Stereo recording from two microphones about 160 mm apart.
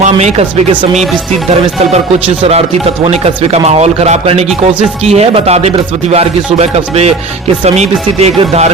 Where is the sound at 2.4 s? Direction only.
40° right (ahead or behind).